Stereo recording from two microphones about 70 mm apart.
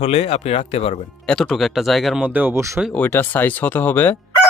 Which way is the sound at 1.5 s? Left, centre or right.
Centre.